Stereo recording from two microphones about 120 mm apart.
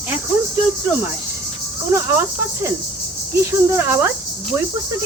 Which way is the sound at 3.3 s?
20° right (ahead or behind).